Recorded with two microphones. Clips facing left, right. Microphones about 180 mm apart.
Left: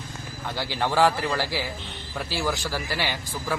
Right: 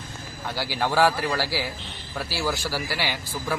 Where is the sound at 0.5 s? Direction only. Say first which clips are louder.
Right 1 dB; 10° right (ahead or behind).